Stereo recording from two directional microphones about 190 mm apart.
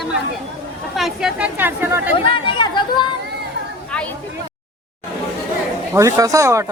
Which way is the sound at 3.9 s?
5° left (ahead or behind).